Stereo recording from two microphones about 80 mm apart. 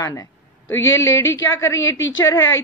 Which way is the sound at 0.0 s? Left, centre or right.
Left.